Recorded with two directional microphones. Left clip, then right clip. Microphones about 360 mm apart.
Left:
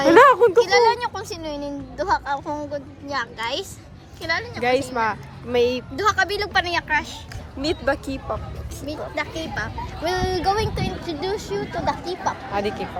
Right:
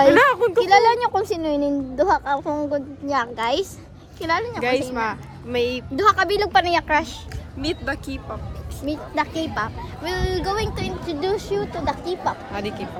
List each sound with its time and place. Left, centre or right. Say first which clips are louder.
0.1 s a sound: left 3 dB; centre
0.6 s a woman's voice: right 2 dB; centre
4.6 s speech: left 1 dB; centre
6.0 s a woman's voice: right 4 dB; centre
7.6 s speech: left 3 dB; centre
8.9 s a woman's voice: right 3 dB; right
10.0 s speech: left 2 dB; centre